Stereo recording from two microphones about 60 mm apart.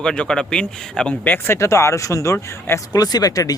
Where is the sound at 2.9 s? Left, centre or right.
Left.